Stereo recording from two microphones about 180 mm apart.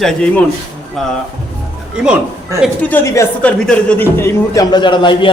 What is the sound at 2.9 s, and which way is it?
A man's voice, 15° left (ahead or behind).